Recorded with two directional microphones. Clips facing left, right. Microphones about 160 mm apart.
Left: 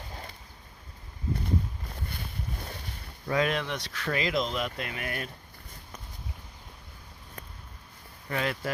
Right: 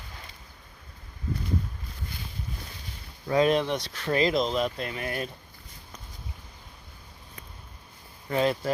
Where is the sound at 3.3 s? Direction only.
30° right (ahead or behind).